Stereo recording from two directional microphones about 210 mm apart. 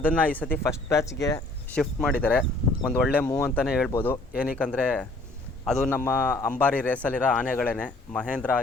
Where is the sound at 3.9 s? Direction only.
10° left (ahead or behind).